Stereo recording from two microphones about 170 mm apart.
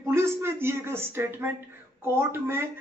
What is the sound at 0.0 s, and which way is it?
Speech, 15° right (ahead or behind).